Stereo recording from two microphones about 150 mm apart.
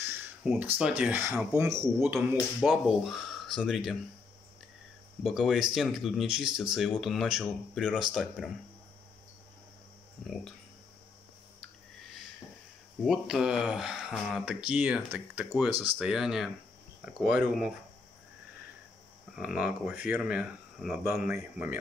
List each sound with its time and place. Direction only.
0.0 s a sound: 15° right (ahead or behind)
0.4 s speech: 5° right (ahead or behind)
2.1 s speech: centre (ahead or behind)
5.2 s speech: centre (ahead or behind)
10.2 s speech: 5° left (ahead or behind)
13.0 s speech: 5° right (ahead or behind)
19.3 s speech: 10° right (ahead or behind)
21.0 s speech: 15° right (ahead or behind)